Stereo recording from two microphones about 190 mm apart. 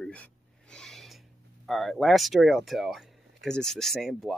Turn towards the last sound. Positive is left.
turn(degrees=0)  # may be behind; listen again after turning